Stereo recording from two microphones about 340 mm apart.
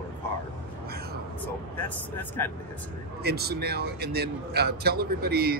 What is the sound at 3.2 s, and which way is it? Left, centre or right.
A man's voice, right.